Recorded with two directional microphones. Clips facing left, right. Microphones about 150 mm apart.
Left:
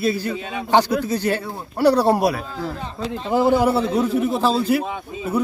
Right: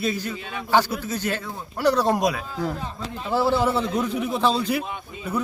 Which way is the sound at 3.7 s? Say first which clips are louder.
Left 4 dB; 30° left (ahead or behind).